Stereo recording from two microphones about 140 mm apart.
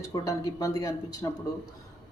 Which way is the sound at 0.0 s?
20° left (ahead or behind).